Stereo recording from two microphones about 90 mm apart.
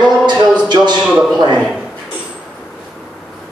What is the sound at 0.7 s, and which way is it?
Speech, 55° right (ahead or behind).